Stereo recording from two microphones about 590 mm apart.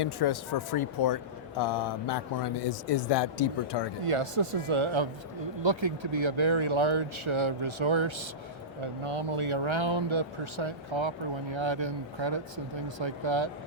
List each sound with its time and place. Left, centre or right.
0.0 s speech: left
4.0 s speech: right